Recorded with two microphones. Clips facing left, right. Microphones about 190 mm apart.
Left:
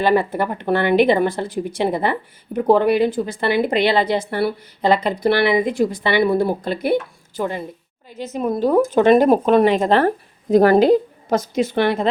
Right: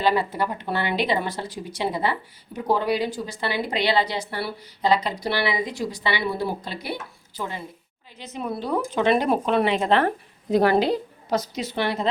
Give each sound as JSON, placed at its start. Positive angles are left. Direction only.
{"t": 0.0, "sound": "speech", "side_deg": 55}